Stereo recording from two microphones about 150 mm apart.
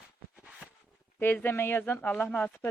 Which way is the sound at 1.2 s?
15° left (ahead or behind).